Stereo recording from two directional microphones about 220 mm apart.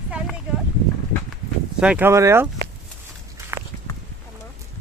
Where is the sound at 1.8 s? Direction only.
5° right (ahead or behind).